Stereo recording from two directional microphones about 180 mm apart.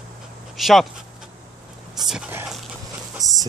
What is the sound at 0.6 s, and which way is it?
Dog, centre (ahead or behind).